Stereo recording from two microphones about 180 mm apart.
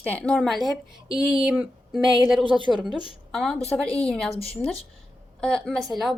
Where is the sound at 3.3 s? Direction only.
Centre (ahead or behind).